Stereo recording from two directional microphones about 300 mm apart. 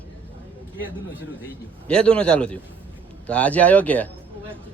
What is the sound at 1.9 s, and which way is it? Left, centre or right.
Speech, centre.